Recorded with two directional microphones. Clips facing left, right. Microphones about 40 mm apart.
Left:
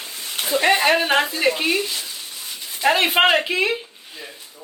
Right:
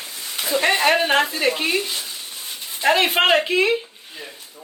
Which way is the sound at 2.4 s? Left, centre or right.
Right.